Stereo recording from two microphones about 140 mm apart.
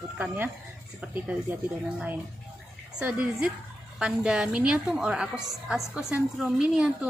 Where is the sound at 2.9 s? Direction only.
10° right (ahead or behind).